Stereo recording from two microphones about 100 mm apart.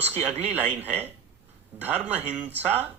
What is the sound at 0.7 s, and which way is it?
A man's voice, 20° right (ahead or behind).